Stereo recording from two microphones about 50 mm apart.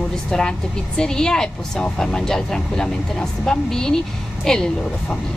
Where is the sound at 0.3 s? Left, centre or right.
Centre.